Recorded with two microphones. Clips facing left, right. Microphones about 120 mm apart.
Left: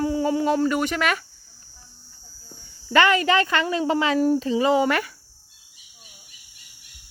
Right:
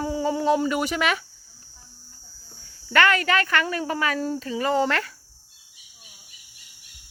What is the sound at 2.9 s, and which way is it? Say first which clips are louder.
Speech: left 2 dB; 15° left (ahead or behind).